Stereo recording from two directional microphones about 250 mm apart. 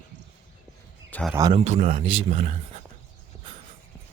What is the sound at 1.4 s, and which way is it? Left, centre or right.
Speech, centre.